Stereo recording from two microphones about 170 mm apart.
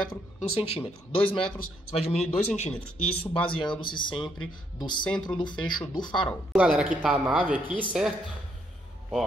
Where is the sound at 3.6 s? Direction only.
30° left (ahead or behind).